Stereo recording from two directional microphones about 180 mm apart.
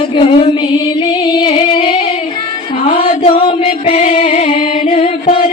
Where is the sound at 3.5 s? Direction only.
35° left (ahead or behind).